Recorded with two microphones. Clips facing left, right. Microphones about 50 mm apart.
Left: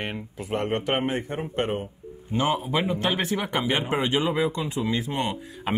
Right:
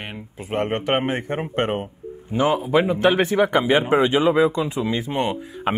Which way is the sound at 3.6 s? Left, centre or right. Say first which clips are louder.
Right 7 dB; right.